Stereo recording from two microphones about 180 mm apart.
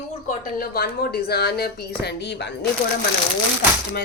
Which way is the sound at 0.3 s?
55° left (ahead or behind).